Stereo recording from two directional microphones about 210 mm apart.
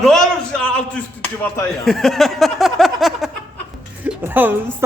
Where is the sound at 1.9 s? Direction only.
Centre (ahead or behind).